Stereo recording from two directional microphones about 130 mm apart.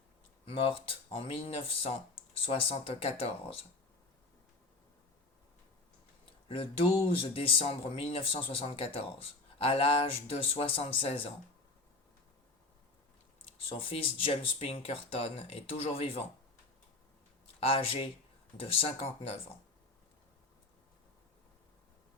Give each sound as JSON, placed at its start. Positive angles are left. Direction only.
{"t": 0.4, "sound": "speech", "side_deg": 45}
{"t": 6.5, "sound": "speech", "side_deg": 45}
{"t": 13.7, "sound": "speech", "side_deg": 45}
{"t": 17.6, "sound": "speech", "side_deg": 45}